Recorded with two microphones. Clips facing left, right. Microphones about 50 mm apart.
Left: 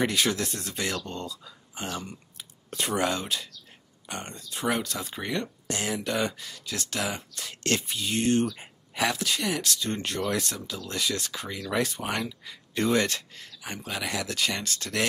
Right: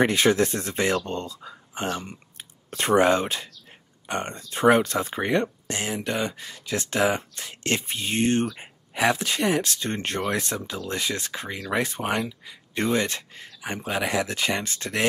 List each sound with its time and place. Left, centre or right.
0.0 s speech: right
12.2 s speech: centre
12.7 s speech: right